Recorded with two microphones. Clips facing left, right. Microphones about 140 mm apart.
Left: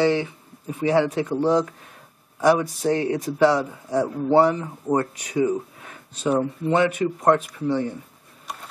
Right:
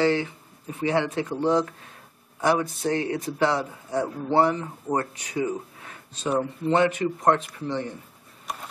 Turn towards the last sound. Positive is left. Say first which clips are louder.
# left 6 dB
turn(degrees=5)  # may be behind; listen again after turning